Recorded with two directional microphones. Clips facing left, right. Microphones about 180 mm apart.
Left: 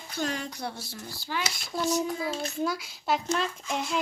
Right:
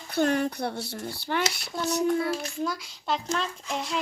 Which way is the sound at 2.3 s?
25° left (ahead or behind).